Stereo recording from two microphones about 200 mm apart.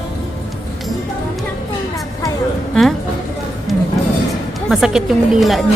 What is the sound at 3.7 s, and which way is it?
Music, centre (ahead or behind).